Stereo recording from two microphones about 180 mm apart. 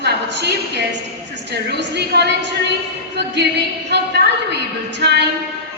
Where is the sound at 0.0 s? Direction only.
70° right (ahead or behind).